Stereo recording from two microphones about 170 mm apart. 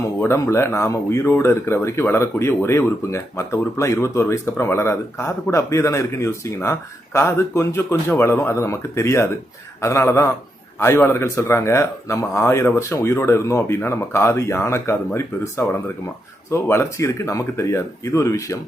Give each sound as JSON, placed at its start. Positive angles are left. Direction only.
{"t": 0.2, "sound": "speech", "side_deg": 15}